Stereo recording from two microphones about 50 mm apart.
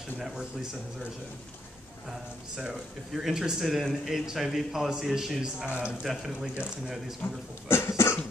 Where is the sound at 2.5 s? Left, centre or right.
Centre.